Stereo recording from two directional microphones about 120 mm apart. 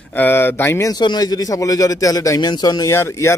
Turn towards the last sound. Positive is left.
turn(degrees=20)  # may be behind; listen again after turning